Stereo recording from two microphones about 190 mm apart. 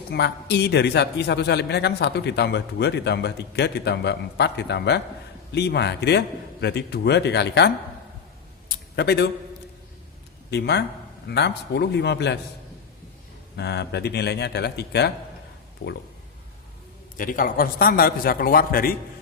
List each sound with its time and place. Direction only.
0.1 s a man's voice: 60° left (ahead or behind)
9.0 s a man's voice: 60° left (ahead or behind)
10.5 s a man's voice: 60° left (ahead or behind)
13.6 s a man's voice: 60° left (ahead or behind)
17.2 s a man's voice: 45° left (ahead or behind)